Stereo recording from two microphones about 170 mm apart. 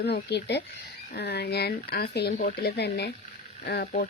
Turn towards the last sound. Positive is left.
turn(degrees=65)  # may be behind; listen again after turning